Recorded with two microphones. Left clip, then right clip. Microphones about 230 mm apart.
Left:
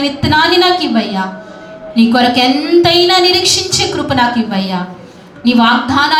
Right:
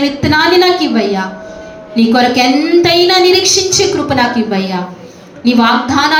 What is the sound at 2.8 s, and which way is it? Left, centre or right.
A woman's voice, left.